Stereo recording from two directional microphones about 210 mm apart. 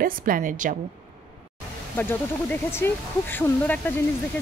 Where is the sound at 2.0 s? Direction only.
10° left (ahead or behind).